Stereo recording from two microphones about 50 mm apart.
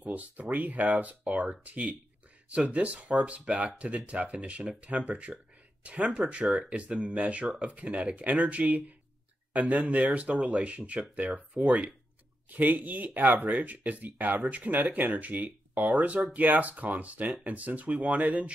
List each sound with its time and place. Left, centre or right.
0.0 s speech: right
6.4 s speech: centre
6.7 s speech: right